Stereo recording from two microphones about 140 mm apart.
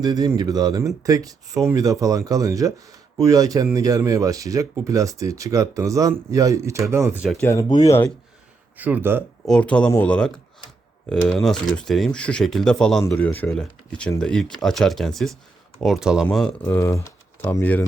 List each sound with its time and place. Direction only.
0.0 s speech: 25° right (ahead or behind)
7.7 s speech: 30° left (ahead or behind)
8.8 s speech: 15° right (ahead or behind)
9.5 s speech: 10° left (ahead or behind)
11.2 s speech: 20° left (ahead or behind)
11.4 s speech: 5° left (ahead or behind)
16.2 s speech: 5° left (ahead or behind)